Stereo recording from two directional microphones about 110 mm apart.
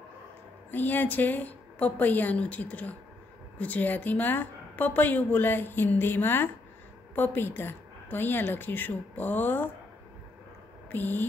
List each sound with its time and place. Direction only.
0.7 s a woman's voice: 15° left (ahead or behind)
10.9 s a woman's voice: 15° left (ahead or behind)